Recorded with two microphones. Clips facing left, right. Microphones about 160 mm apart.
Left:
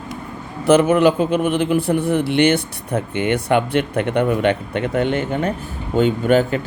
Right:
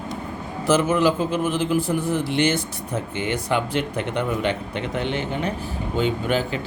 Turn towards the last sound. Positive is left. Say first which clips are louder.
# left 7 dB
turn(degrees=50)  # may be behind; listen again after turning